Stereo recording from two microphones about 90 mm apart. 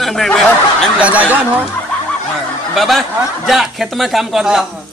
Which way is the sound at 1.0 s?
15° right (ahead or behind).